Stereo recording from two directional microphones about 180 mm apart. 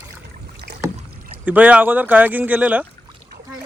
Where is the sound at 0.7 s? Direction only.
70° right (ahead or behind).